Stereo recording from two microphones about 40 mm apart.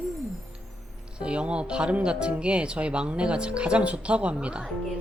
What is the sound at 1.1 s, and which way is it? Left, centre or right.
Speech, right.